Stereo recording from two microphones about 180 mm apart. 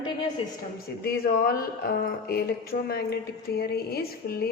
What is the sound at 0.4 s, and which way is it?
Speech, 30° left (ahead or behind).